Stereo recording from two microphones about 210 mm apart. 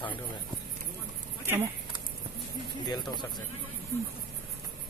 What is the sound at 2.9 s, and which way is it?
Speech, 20° left (ahead or behind).